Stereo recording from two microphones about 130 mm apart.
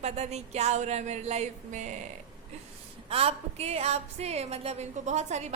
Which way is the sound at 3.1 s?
50° right (ahead or behind).